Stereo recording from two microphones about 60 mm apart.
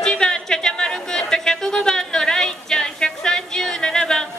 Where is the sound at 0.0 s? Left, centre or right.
Centre.